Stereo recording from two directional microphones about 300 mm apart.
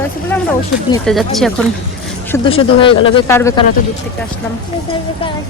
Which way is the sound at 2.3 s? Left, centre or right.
Centre.